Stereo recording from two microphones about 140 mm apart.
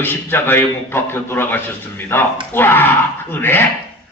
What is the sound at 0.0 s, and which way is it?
A man's voice, 15° left (ahead or behind).